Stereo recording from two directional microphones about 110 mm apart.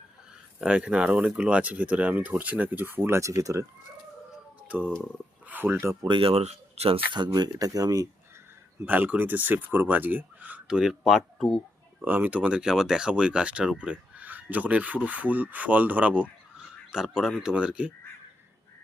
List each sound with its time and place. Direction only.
0.6 s speech: 5° right (ahead or behind); by 3.7 s 30° right (ahead or behind)
5.5 s speech: 15° right (ahead or behind)
6.0 s speech: 50° right (ahead or behind)
6.3 s speech: 75° right (ahead or behind)
7.1 s speech: 40° right (ahead or behind)
8.8 s speech: 15° right (ahead or behind); by 11.6 s 5° left (ahead or behind)
12.0 s speech: 15° right (ahead or behind)